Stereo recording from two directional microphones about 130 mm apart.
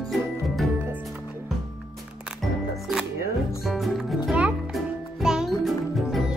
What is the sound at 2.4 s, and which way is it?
Music, 5° right (ahead or behind).